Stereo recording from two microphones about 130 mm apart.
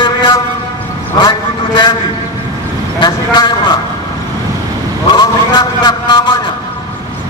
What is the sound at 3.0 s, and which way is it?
Speech, 35° left (ahead or behind).